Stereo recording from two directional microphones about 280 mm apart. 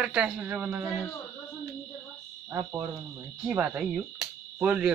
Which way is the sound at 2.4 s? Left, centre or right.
Centre.